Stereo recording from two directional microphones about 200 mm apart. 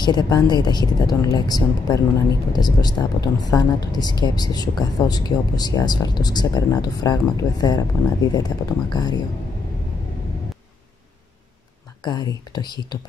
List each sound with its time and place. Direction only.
0.0 s speech: 20° left (ahead or behind)
12.0 s speech: 20° left (ahead or behind)